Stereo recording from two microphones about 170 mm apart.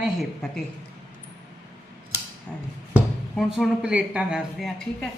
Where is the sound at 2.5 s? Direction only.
5° left (ahead or behind).